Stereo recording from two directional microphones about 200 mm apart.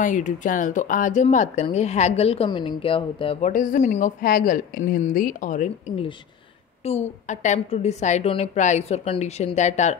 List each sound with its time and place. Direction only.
0.0 s speech: 40° left (ahead or behind)